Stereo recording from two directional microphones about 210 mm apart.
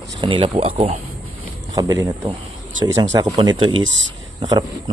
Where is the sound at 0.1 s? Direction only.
25° right (ahead or behind).